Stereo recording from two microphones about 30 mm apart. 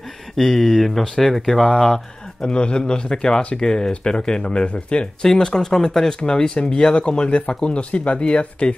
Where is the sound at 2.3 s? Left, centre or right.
Left.